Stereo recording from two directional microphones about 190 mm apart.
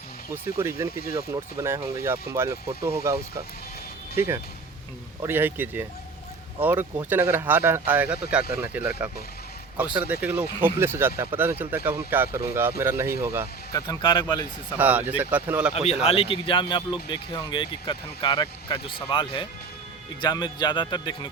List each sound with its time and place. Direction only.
0.3 s speech: 10° right (ahead or behind)
5.2 s speech: 10° right (ahead or behind)
13.7 s speech: 25° left (ahead or behind)
14.8 s speech: 10° right (ahead or behind)
15.7 s speech: 35° left (ahead or behind)